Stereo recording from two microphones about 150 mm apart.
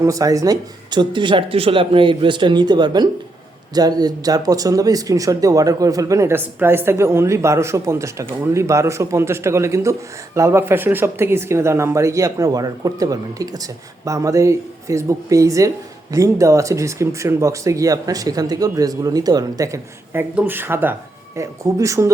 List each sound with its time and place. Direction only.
0.0 s speech: 20° right (ahead or behind)